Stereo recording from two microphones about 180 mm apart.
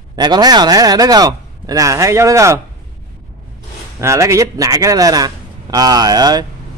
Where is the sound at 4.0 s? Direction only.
15° right (ahead or behind).